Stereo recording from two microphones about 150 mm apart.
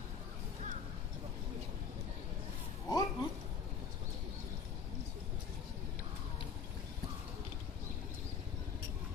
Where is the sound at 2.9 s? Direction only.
25° left (ahead or behind).